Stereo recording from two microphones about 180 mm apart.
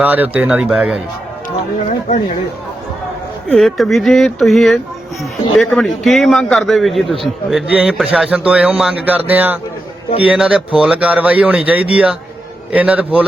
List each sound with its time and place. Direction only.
0.0 s speech: 10° right (ahead or behind)
2.0 s speech: 40° left (ahead or behind)
3.5 s a man's voice: centre (ahead or behind)